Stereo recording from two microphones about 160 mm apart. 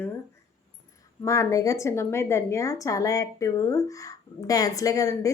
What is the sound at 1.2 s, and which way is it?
A woman's voice, 20° left (ahead or behind).